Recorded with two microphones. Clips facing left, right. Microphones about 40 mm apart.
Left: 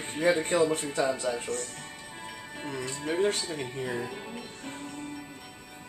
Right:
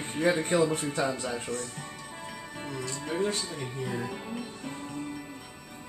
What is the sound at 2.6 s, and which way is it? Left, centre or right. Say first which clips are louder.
Speech: left 2 dB; left.